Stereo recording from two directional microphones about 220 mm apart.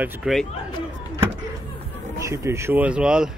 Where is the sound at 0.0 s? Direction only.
5° right (ahead or behind).